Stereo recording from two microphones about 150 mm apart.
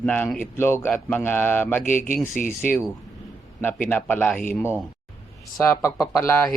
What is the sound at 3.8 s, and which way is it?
Speech, 10° left (ahead or behind).